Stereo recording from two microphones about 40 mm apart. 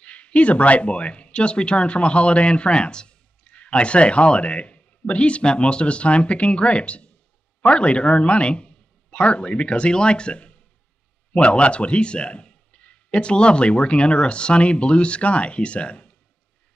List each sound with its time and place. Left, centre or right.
0.0 s a man's voice: left